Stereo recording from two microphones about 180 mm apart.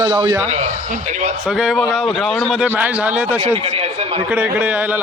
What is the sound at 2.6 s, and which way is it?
Speech, 10° right (ahead or behind).